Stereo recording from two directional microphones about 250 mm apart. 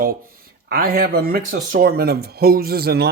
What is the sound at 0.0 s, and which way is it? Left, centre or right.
Speech, right.